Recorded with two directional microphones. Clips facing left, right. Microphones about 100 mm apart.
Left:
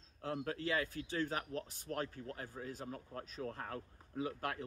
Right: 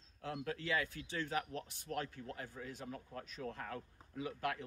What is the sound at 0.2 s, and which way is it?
A man's voice, 35° left (ahead or behind).